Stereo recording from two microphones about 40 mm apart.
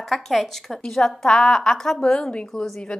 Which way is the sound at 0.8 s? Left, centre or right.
Centre.